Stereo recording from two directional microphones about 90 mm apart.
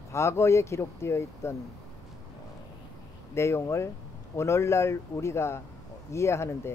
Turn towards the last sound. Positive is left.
turn(degrees=30)  # may be behind; listen again after turning